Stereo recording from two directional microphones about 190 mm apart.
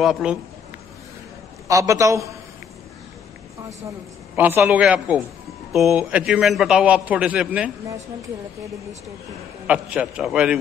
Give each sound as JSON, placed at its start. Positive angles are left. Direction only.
{"t": 0.0, "sound": "a man's voice", "side_deg": -5}
{"t": 1.7, "sound": "a man's voice", "side_deg": -15}
{"t": 4.4, "sound": "a man's voice", "side_deg": -10}
{"t": 9.7, "sound": "a man's voice", "side_deg": -5}